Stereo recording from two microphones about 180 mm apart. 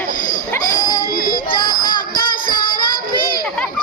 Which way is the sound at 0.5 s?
20° left (ahead or behind).